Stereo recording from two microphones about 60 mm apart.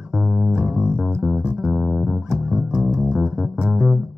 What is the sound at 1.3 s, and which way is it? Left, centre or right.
Music, centre.